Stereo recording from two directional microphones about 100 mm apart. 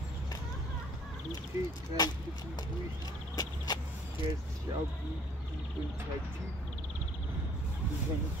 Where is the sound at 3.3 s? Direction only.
45° left (ahead or behind).